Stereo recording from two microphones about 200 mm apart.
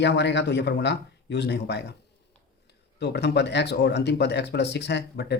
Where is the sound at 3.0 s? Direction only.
55° left (ahead or behind).